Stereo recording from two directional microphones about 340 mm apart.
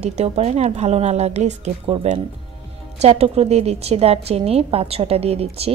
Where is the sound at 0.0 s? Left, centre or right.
Centre.